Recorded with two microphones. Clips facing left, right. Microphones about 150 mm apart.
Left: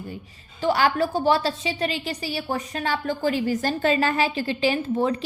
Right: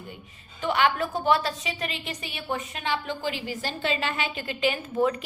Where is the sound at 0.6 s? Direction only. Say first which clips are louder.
Left 3 dB; 35° left (ahead or behind).